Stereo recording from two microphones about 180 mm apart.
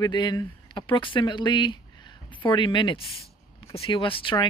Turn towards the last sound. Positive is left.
turn(degrees=25)  # may be behind; listen again after turning